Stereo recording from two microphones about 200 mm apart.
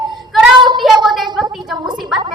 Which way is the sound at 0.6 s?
25° right (ahead or behind).